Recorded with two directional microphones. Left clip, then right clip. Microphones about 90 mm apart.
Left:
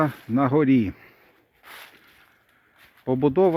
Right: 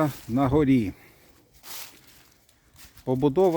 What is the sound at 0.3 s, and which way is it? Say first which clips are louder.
Speech: left 2 dB; 30° right (ahead or behind).